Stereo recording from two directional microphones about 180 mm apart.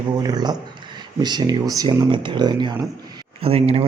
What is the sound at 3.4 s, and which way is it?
Speech, 35° right (ahead or behind).